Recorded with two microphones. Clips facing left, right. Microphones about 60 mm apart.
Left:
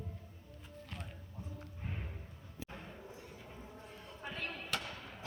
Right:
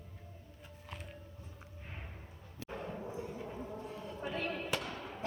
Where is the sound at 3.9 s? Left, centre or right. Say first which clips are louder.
Right 4 dB; centre.